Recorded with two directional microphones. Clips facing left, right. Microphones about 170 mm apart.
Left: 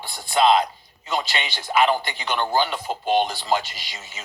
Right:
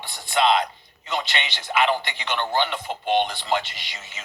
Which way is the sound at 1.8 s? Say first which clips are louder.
Left 2 dB; 40° left (ahead or behind).